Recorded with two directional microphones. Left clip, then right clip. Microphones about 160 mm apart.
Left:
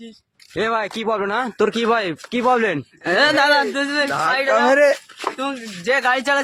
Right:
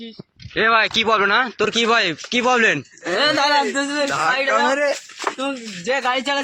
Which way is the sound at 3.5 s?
5° right (ahead or behind).